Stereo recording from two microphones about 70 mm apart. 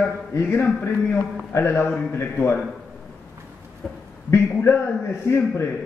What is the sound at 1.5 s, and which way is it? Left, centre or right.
Speech, left.